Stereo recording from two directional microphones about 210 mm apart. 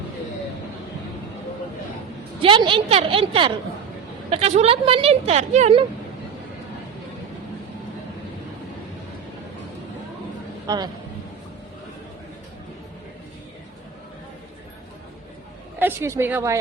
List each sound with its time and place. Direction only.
2.4 s a woman's voice: 25° right (ahead or behind)
10.7 s a woman's voice: 20° right (ahead or behind)
15.8 s a woman's voice: 10° right (ahead or behind)